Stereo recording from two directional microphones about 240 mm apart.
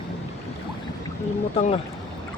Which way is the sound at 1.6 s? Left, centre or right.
Left.